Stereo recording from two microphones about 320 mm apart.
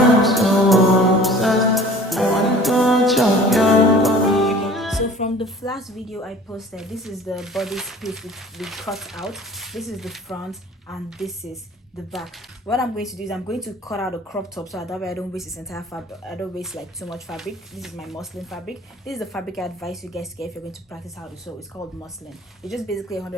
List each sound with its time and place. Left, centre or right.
0.2 s music: centre
4.9 s music: left
5.6 s speech: centre
15.5 s a woman's voice: centre
16.2 s speech: centre
22.6 s speech: centre